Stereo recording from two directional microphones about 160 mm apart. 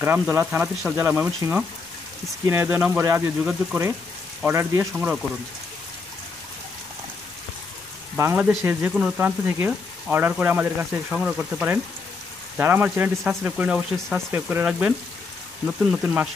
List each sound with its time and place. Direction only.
0.0 s speech: 15° right (ahead or behind)
8.2 s speech: 15° right (ahead or behind)